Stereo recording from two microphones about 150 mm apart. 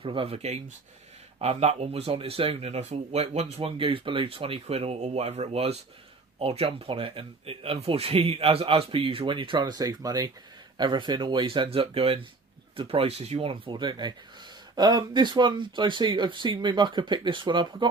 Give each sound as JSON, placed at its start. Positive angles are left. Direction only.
{"t": 0.0, "sound": "speech", "side_deg": -35}